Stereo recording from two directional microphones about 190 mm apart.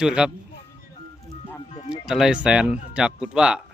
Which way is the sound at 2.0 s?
5° right (ahead or behind).